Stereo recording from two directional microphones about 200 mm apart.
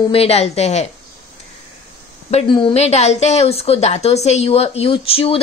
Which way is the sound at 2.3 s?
25° left (ahead or behind).